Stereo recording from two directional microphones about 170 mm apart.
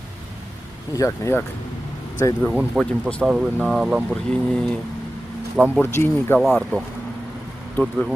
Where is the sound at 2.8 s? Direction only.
5° left (ahead or behind).